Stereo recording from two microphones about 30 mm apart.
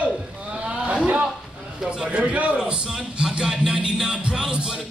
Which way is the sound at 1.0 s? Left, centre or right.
Right.